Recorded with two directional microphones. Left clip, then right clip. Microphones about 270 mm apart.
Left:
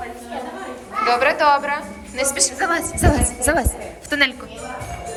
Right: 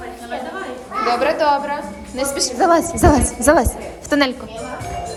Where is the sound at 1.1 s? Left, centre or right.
Centre.